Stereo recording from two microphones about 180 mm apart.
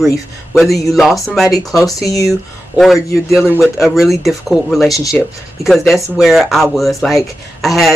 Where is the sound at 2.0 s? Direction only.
20° left (ahead or behind).